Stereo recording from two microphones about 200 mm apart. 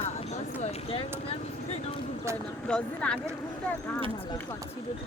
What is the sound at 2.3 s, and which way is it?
Speech, 15° right (ahead or behind).